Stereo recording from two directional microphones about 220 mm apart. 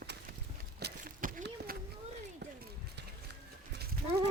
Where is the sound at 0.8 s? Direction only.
45° right (ahead or behind).